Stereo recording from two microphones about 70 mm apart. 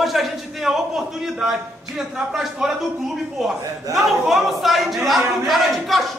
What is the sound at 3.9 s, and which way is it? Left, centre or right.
A man's voice, centre.